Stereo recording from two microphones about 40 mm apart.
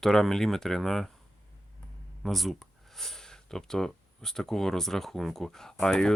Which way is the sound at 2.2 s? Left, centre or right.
Centre.